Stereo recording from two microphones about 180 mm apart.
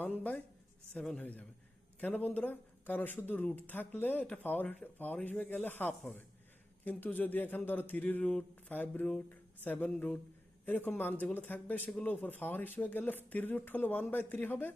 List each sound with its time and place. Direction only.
0.0 s speech: 10° left (ahead or behind)